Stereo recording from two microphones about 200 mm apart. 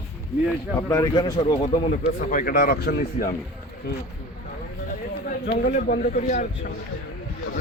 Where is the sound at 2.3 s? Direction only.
40° left (ahead or behind).